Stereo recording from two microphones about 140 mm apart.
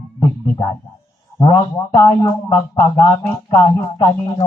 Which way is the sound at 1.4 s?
30° left (ahead or behind).